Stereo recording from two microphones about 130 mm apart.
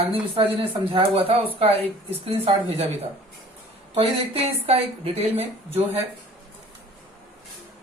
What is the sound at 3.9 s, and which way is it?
Speech, 50° right (ahead or behind).